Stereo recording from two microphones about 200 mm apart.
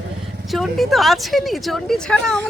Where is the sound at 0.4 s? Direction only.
Centre (ahead or behind).